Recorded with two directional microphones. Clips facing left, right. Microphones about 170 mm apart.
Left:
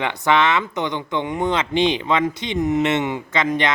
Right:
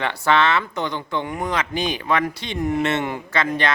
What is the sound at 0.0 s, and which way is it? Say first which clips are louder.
Speech: left 1 dB; 20° left (ahead or behind).